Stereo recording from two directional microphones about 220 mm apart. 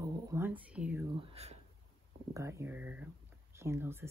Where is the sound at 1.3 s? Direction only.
30° right (ahead or behind).